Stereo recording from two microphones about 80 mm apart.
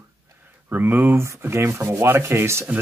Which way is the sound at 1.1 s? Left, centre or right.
Right.